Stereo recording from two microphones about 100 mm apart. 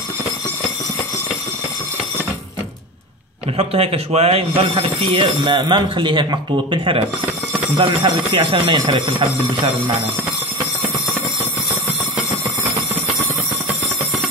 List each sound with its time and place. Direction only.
3.5 s speech: 90° right; by 9.3 s 55° right (ahead or behind)